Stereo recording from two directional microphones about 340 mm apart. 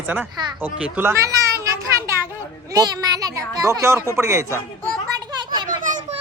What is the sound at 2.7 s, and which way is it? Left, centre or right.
Speech, centre.